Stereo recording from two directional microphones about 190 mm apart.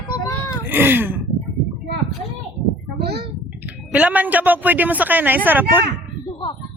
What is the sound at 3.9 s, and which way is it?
A woman's voice, 10° right (ahead or behind).